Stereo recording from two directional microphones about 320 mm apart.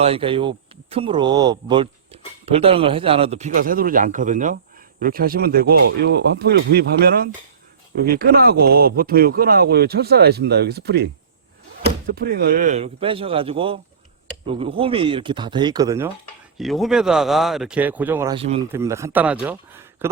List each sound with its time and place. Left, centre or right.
0.0 s speech: centre